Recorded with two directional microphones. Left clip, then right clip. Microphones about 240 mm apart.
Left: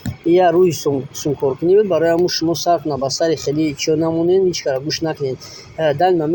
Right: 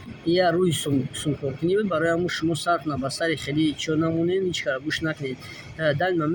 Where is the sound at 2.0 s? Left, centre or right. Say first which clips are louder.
Left 8 dB; centre.